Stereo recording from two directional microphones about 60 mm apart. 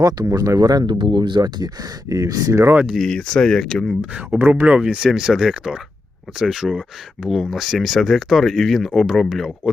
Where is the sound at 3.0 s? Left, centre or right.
Centre.